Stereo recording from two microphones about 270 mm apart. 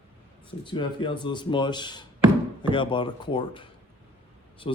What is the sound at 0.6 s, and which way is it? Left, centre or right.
A man's voice, centre.